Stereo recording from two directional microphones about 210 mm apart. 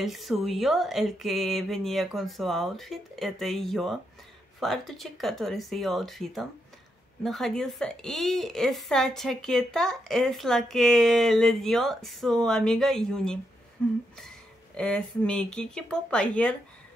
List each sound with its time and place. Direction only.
0.0 s speech: centre (ahead or behind)